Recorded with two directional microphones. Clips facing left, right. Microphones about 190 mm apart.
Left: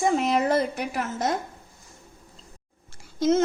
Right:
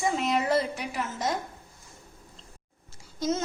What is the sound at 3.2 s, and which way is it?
Speech, 55° left (ahead or behind).